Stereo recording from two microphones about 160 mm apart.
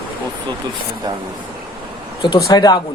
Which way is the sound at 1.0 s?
25° right (ahead or behind).